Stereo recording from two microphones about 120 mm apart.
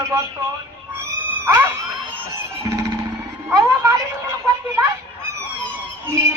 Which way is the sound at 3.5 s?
25° right (ahead or behind).